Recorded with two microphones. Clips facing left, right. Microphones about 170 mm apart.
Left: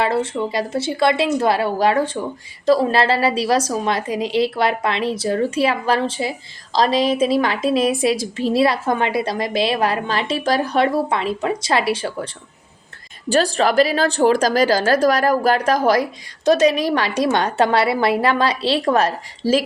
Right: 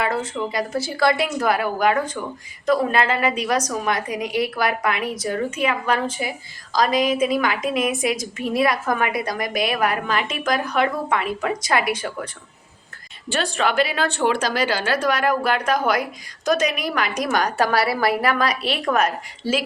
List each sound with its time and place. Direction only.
0.0 s a woman's voice: 30° left (ahead or behind)